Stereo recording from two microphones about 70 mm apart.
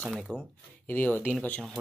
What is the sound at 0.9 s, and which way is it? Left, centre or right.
Speech, left.